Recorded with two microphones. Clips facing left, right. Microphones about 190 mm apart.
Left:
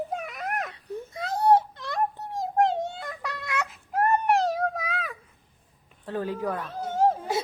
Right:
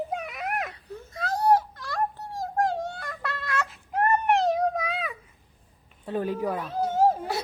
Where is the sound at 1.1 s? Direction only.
25° left (ahead or behind).